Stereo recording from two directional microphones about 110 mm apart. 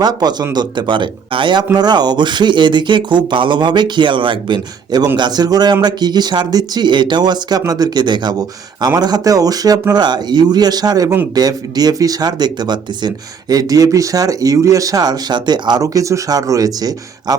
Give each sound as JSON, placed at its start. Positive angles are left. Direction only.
{"t": 0.0, "sound": "speech", "side_deg": -40}